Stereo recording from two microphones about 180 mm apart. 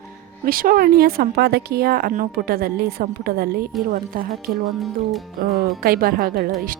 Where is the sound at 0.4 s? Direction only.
50° right (ahead or behind).